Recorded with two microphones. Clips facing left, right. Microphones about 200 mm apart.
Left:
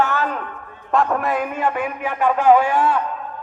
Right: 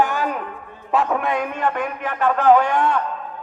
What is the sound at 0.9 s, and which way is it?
A man's voice, centre (ahead or behind).